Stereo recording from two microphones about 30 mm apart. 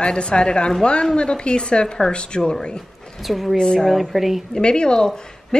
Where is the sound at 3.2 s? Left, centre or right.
Centre.